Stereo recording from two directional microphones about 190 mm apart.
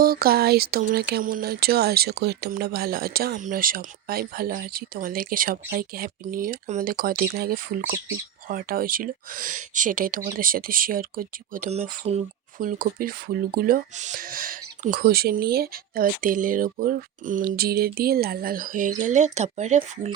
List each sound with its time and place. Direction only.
0.0 s speech: 50° right (ahead or behind)